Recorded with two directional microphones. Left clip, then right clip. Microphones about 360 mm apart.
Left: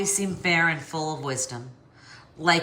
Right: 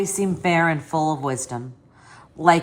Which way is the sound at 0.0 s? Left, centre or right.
Centre.